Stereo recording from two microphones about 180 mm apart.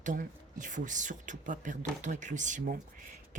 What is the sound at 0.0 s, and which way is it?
Speech, 45° right (ahead or behind).